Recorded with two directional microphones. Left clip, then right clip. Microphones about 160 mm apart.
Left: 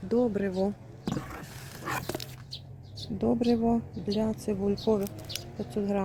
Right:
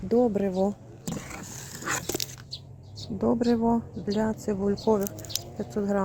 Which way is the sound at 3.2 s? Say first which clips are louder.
Right 2 dB; 10° right (ahead or behind).